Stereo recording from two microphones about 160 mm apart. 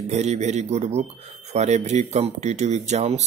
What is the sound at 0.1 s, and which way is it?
Speech, 45° right (ahead or behind).